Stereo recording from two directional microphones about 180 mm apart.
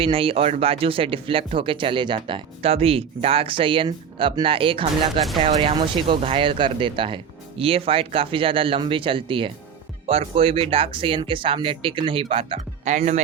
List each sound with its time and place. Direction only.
0.0 s speech: 30° right (ahead or behind)